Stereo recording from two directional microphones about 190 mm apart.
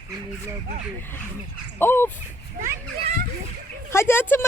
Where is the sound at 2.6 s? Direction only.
45° right (ahead or behind).